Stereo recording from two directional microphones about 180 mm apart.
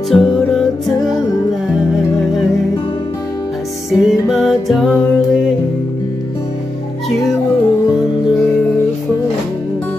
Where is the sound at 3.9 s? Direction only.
Centre (ahead or behind).